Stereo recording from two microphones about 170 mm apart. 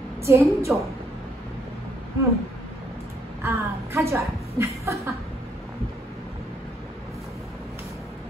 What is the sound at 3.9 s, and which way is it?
Speech, 15° right (ahead or behind).